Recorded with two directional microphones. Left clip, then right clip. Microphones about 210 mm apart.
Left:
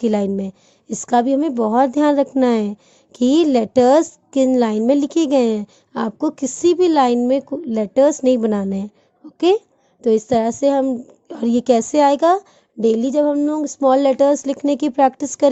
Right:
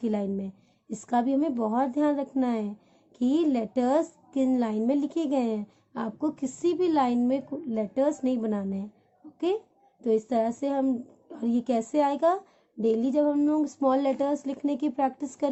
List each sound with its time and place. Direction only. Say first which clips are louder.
0.0 s a woman's voice: left 11 dB; 45° left (ahead or behind)
10.0 s a woman's voice: left 9 dB; 40° left (ahead or behind)